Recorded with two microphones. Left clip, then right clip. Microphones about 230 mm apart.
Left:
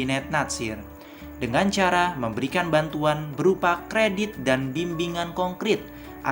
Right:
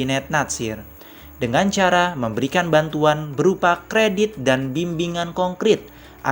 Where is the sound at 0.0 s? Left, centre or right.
Right.